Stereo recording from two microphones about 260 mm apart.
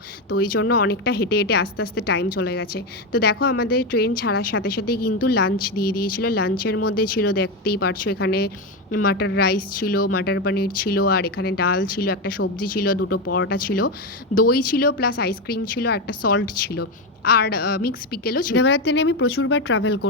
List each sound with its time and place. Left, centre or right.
0.3 s speech: left